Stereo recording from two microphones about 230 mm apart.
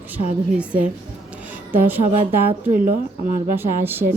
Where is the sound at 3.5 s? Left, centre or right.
Centre.